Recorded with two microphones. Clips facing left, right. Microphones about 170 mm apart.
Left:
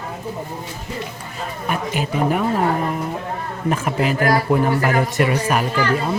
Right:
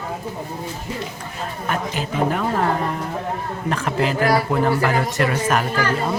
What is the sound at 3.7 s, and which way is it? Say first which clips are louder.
A woman's voice: left 1 dB; 15° left (ahead or behind).